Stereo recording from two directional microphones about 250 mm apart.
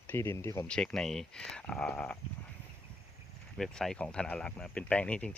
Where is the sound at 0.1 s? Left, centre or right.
Centre.